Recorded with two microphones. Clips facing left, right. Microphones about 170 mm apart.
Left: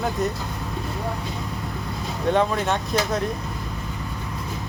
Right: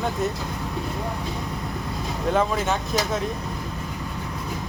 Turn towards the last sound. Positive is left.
turn(degrees=0)  # may be behind; listen again after turning